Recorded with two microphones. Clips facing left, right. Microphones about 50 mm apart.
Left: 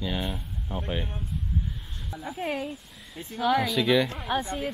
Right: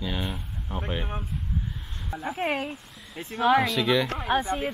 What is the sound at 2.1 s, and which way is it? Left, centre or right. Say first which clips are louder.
Speech: right 4 dB; right.